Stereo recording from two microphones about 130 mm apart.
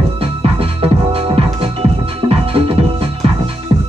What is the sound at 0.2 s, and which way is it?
Music, 45° right (ahead or behind).